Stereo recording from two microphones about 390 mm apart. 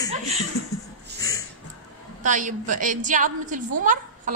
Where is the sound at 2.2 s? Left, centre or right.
Centre.